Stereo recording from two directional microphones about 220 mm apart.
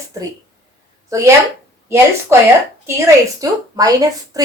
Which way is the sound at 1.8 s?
10° right (ahead or behind).